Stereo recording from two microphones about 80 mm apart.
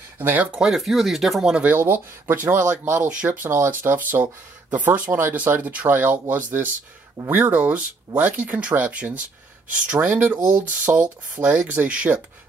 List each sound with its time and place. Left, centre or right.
0.2 s speech: right
0.6 s speech: centre
1.8 s speech: right